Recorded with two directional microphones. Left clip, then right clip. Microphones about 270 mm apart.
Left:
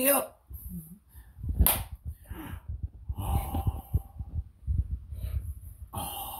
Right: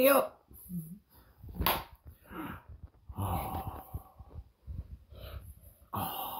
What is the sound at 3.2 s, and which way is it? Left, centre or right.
Snort, centre.